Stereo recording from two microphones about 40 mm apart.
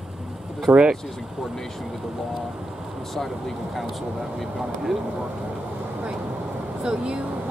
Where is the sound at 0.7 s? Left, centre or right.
Right.